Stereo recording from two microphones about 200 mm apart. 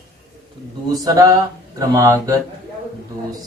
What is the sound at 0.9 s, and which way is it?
Speech, 20° right (ahead or behind).